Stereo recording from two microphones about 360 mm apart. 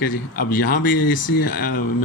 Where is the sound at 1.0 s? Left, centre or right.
Left.